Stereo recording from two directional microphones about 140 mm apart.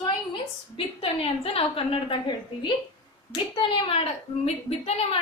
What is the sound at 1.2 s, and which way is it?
A woman's voice, 40° left (ahead or behind).